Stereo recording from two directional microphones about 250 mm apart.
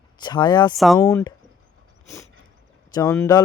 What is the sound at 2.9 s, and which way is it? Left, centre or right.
Speech, centre.